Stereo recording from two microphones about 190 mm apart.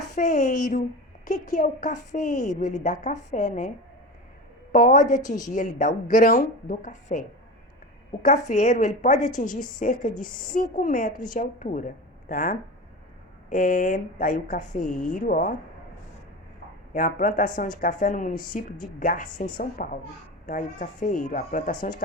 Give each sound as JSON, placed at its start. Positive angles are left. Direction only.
{"t": 0.1, "sound": "a woman's voice", "side_deg": 40}
{"t": 4.7, "sound": "a woman's voice", "side_deg": 45}
{"t": 8.4, "sound": "a woman's voice", "side_deg": 40}
{"t": 16.9, "sound": "a woman's voice", "side_deg": 45}